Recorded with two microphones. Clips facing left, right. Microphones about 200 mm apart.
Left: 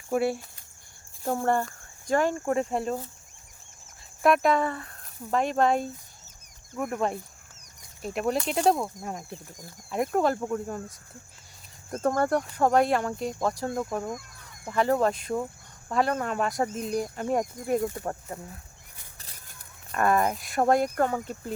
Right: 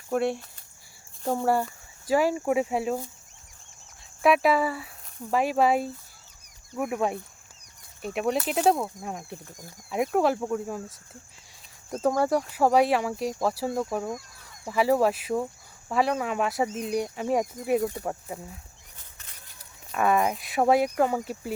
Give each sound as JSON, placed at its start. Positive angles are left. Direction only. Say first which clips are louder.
{"t": 0.1, "sound": "speech", "louder": "even", "side_deg": 5}
{"t": 1.3, "sound": "speech", "louder": "right 1 dB", "side_deg": -5}
{"t": 4.2, "sound": "speech", "louder": "right 1 dB", "side_deg": -5}
{"t": 19.9, "sound": "speech", "louder": "even", "side_deg": 0}